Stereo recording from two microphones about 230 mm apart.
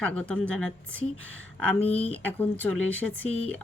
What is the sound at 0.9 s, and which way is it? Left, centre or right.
Speech, right.